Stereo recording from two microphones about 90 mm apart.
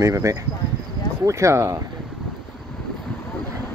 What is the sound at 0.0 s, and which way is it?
Speech, 35° right (ahead or behind).